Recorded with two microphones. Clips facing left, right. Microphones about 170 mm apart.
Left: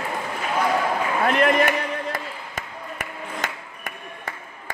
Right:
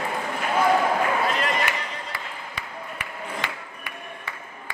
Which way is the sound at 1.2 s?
60° left (ahead or behind).